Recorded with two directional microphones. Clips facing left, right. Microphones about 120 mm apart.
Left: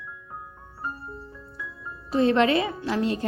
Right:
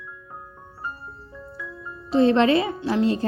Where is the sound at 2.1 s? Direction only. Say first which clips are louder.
Right 3 dB; 30° right (ahead or behind).